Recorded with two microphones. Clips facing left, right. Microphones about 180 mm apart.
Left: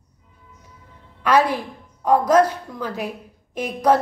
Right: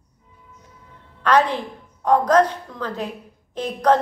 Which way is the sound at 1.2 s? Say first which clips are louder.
Even; 10° left (ahead or behind).